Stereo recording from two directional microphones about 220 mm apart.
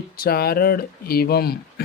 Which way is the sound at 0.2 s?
45° left (ahead or behind).